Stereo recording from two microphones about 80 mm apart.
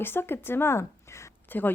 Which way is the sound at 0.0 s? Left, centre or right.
Left.